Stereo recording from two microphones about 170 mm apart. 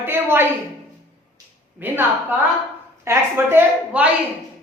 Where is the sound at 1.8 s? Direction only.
10° right (ahead or behind).